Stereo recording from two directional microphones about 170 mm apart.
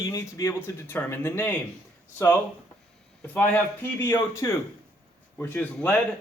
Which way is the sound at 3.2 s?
10° left (ahead or behind).